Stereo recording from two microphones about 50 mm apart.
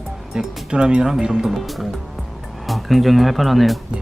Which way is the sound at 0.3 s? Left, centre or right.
Centre.